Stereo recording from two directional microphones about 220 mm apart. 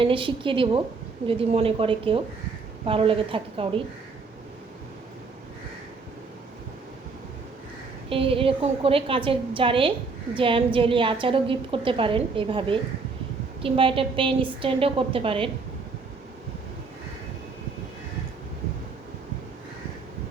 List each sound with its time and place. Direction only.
0.0 s a woman's voice: 25° right (ahead or behind)
8.1 s a woman's voice: 25° right (ahead or behind)